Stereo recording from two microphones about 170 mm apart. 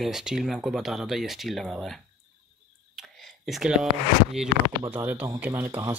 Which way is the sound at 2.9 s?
Centre (ahead or behind).